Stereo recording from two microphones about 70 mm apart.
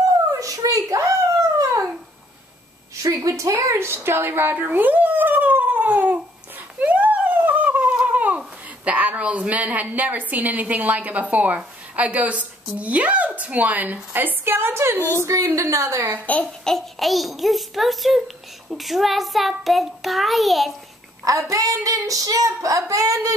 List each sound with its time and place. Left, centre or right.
0.3 s a sound: right
1.6 s dog: right
3.3 s speech: right
6.8 s a sound: right
7.9 s a woman's voice: centre; by 15.0 s right
15.2 s speech: right
16.6 s child singing: centre
21.2 s speech: right